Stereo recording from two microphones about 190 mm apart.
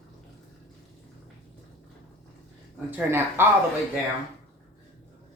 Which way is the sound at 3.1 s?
10° right (ahead or behind).